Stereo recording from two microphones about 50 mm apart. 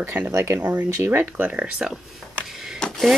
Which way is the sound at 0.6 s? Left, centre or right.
Right.